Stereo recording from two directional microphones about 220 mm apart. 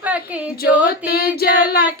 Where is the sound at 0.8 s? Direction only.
45° left (ahead or behind).